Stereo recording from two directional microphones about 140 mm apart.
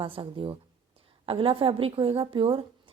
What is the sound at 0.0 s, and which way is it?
Speech, 40° right (ahead or behind).